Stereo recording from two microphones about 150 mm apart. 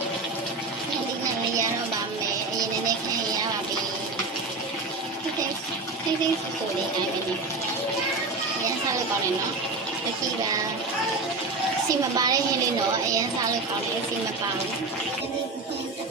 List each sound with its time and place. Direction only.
11.9 s a woman's voice: 25° right (ahead or behind)